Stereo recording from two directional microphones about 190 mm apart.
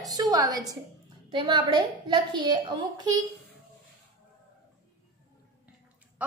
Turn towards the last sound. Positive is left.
turn(degrees=-5)  # may be behind; listen again after turning